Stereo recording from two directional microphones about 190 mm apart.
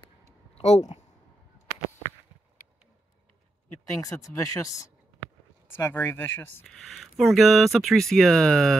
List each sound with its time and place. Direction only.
0.6 s speech: 35° left (ahead or behind)
4.0 s speech: 15° left (ahead or behind)